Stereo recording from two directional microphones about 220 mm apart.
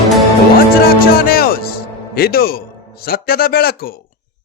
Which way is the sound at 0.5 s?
40° left (ahead or behind).